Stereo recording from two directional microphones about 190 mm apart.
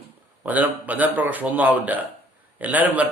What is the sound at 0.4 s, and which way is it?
A man's voice, 10° right (ahead or behind).